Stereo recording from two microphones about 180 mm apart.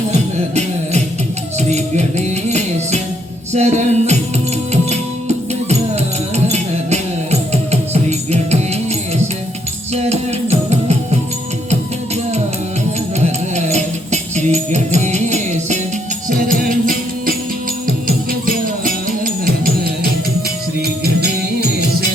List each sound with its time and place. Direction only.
0.1 s music: 40° right (ahead or behind)
6.3 s music: 35° right (ahead or behind)
13.1 s music: 40° right (ahead or behind)
21.0 s music: 60° right (ahead or behind)